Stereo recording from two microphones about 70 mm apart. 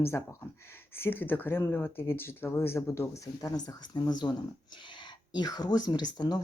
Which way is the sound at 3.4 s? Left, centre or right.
Left.